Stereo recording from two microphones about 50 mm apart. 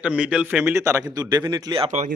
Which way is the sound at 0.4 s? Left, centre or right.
Right.